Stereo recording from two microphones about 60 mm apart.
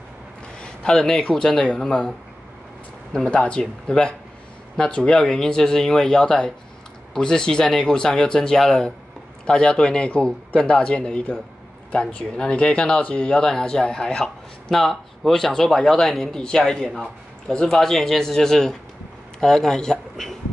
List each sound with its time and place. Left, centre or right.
0.6 s a sound: centre
1.3 s speech: centre
3.3 s speech: centre